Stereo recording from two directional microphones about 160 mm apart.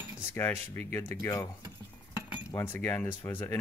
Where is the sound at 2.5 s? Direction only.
10° left (ahead or behind).